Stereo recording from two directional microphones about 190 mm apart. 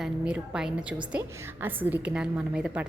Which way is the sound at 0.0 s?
5° right (ahead or behind).